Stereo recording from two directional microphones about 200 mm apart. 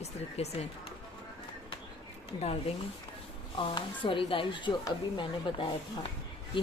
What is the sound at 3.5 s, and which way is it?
Speech, 25° left (ahead or behind).